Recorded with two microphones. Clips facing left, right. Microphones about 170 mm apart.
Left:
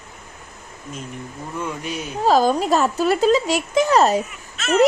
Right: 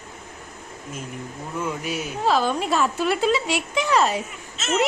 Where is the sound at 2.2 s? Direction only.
40° left (ahead or behind).